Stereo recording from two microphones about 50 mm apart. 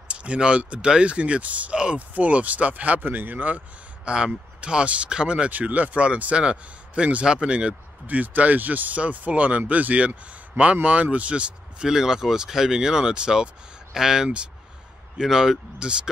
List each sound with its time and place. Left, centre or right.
0.1 s speech: right
5.5 s speech: right
11.9 s speech: centre